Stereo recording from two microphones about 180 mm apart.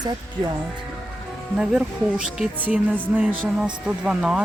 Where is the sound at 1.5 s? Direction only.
5° right (ahead or behind).